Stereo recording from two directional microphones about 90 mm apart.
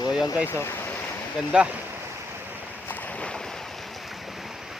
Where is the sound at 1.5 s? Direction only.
10° right (ahead or behind).